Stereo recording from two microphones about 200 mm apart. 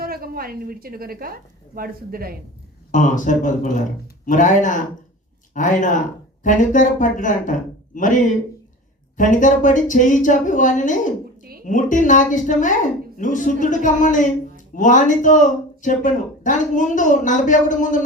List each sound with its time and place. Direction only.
0.0 s a woman's voice: 50° right (ahead or behind)
2.9 s a woman's voice: 40° left (ahead or behind)